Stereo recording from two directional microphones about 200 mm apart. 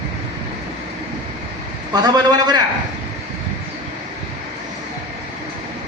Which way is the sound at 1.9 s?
20° right (ahead or behind).